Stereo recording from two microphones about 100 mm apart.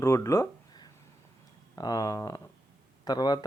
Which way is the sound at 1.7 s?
40° left (ahead or behind).